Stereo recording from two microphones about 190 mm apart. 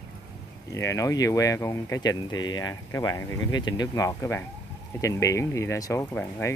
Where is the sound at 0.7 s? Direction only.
15° left (ahead or behind).